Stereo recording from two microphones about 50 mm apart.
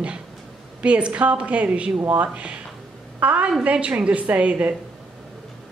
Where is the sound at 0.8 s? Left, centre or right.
Right.